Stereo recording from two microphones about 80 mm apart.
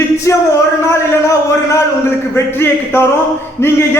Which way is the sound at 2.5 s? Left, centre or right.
Left.